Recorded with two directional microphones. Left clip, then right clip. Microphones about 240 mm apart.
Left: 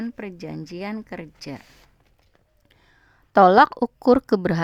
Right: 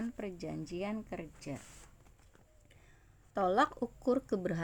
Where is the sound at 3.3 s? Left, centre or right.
Left.